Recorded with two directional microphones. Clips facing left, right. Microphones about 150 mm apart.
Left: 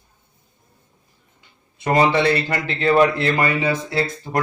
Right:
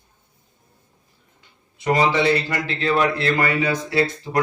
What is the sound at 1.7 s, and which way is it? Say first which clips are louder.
A man's voice: left 2 dB; 55° left (ahead or behind).